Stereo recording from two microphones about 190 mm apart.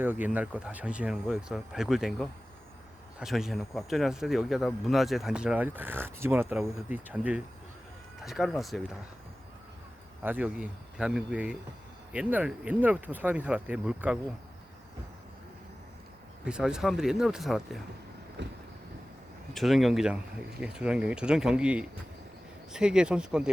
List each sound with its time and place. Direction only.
0.0 s speech: 10° right (ahead or behind)
10.2 s speech: 5° right (ahead or behind)
16.5 s speech: 5° right (ahead or behind)
18.4 s vehicle: 65° right (ahead or behind)
19.5 s speech: centre (ahead or behind)